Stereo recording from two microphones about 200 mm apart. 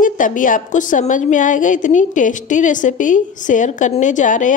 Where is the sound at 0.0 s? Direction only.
40° left (ahead or behind).